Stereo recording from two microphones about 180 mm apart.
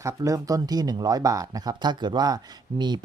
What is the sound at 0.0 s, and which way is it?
Speech, 15° right (ahead or behind).